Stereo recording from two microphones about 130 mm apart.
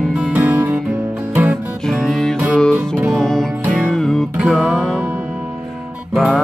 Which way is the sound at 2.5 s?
5° left (ahead or behind).